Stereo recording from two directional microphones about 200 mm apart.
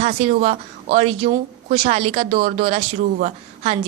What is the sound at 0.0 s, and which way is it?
Speech, 35° right (ahead or behind).